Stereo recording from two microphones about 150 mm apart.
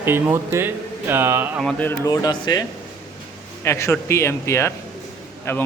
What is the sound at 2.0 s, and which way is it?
Speech, 30° left (ahead or behind).